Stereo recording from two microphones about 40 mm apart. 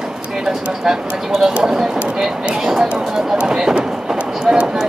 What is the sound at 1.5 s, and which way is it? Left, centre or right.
Speech, right.